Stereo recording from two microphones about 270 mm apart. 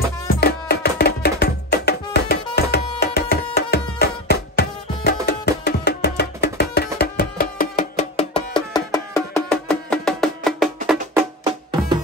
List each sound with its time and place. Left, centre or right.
0.3 s music: left
2.5 s tabla: left
4.0 s music: left
8.7 s music: centre